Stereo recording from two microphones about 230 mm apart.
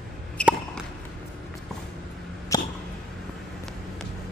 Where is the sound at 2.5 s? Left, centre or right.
Centre.